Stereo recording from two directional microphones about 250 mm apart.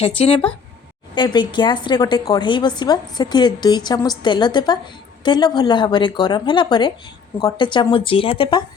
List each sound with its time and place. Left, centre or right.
0.2 s a woman's voice: left